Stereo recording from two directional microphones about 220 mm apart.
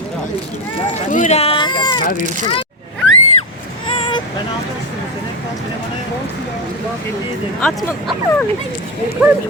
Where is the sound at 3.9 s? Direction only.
20° left (ahead or behind).